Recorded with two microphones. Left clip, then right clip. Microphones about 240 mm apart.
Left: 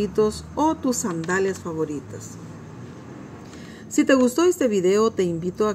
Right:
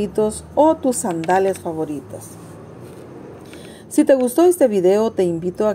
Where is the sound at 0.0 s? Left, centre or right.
Centre.